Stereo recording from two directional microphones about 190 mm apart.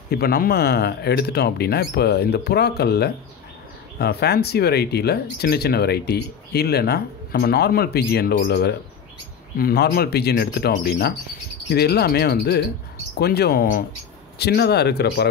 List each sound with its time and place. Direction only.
0.1 s speech: 55° left (ahead or behind)
14.4 s speech: 60° left (ahead or behind)